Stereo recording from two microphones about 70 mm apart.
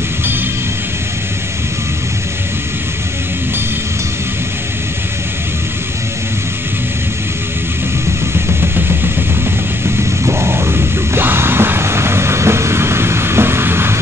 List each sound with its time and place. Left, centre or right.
10.2 s music: right